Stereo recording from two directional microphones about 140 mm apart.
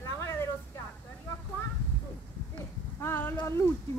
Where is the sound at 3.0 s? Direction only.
15° left (ahead or behind).